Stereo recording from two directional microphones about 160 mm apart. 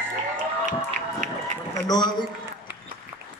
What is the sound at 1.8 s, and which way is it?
Speech, 25° left (ahead or behind).